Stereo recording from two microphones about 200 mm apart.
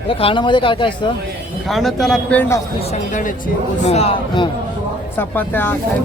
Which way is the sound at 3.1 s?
40° left (ahead or behind).